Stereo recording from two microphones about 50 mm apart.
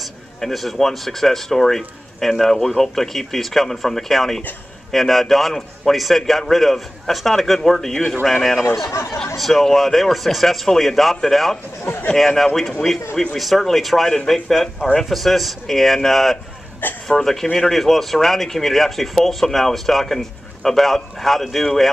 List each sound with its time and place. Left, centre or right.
0.0 s a man's voice: centre
11.8 s a man's voice: left
12.4 s speech: centre
16.8 s speech: left
17.2 s a man's voice: centre